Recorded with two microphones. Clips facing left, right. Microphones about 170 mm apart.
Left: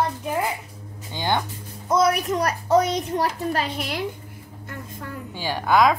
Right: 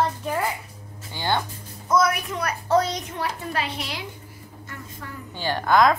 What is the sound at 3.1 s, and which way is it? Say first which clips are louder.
Speech: left 6 dB; 40° left (ahead or behind).